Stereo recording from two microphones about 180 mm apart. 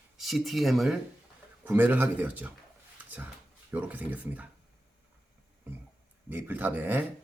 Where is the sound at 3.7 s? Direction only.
10° right (ahead or behind).